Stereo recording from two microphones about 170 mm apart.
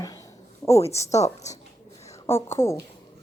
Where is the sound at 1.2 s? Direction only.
40° left (ahead or behind).